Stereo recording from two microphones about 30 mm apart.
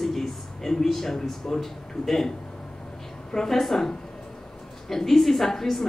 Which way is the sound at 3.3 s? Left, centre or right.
Centre.